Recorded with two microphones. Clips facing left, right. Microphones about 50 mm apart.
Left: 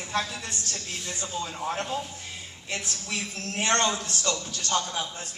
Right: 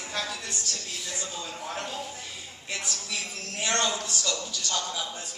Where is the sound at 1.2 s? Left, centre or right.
Left.